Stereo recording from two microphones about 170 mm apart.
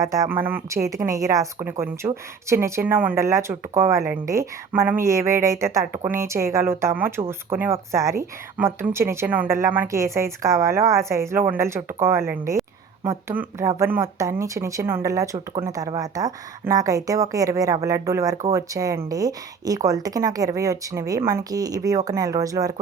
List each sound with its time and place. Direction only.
0.0 s speech: 20° right (ahead or behind)